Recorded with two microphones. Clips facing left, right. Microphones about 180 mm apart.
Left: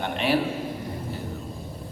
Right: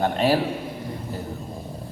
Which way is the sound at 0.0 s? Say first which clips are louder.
Right 5 dB; 40° right (ahead or behind).